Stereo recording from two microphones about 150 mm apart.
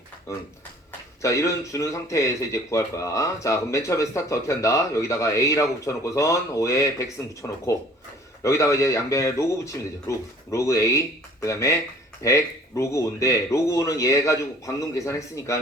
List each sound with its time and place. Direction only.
0.3 s speech: 20° left (ahead or behind)